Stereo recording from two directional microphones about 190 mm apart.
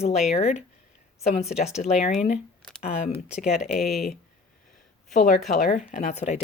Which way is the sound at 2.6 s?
5° left (ahead or behind).